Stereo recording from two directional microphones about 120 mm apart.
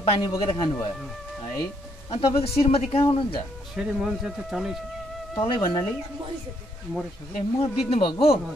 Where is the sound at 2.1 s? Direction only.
55° left (ahead or behind).